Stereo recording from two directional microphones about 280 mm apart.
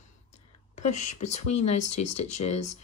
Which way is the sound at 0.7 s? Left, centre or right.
Left.